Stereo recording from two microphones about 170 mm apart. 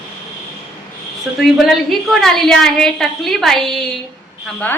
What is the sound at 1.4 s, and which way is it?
A woman's voice, centre (ahead or behind).